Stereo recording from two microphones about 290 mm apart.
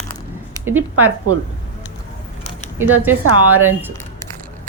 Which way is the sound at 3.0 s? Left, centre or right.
Right.